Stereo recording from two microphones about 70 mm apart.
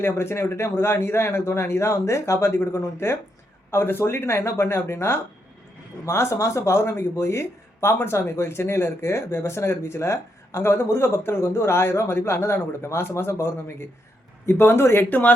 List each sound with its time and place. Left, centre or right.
0.0 s speech: left